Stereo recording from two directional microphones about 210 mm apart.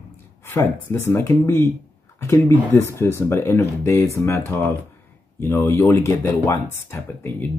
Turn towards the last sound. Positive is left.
turn(degrees=10)  # may be behind; listen again after turning